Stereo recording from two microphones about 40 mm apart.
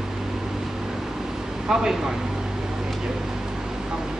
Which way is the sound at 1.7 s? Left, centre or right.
Centre.